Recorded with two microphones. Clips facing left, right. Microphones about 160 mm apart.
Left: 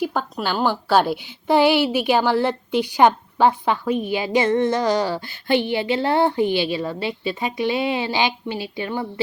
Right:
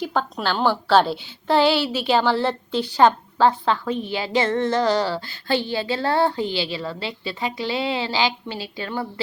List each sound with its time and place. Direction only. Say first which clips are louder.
0.0 s a woman's voice: left 1 dB; 5° left (ahead or behind)